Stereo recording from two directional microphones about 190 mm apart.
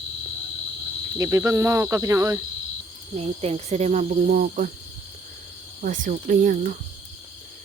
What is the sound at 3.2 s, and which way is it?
Speech, 30° right (ahead or behind).